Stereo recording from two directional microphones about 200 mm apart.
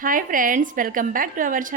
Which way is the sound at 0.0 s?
45° right (ahead or behind).